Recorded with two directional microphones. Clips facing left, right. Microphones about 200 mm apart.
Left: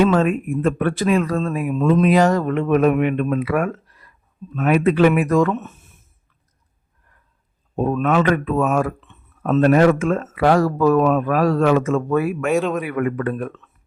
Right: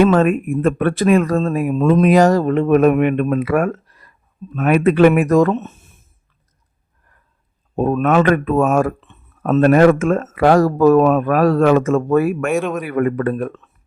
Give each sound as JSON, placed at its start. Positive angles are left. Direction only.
{"t": 0.0, "sound": "speech", "side_deg": -55}
{"t": 4.5, "sound": "speech", "side_deg": -55}
{"t": 7.8, "sound": "speech", "side_deg": -55}
{"t": 12.5, "sound": "speech", "side_deg": 0}
{"t": 12.8, "sound": "speech", "side_deg": -40}